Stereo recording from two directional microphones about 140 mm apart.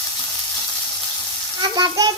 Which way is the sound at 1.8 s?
30° right (ahead or behind).